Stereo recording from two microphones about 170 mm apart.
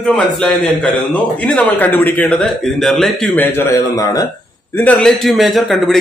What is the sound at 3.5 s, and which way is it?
Speech, 20° left (ahead or behind).